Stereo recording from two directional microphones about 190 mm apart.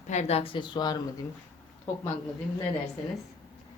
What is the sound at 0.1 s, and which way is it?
Speech, 35° left (ahead or behind).